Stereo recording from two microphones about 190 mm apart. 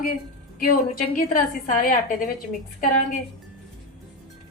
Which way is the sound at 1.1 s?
45° left (ahead or behind).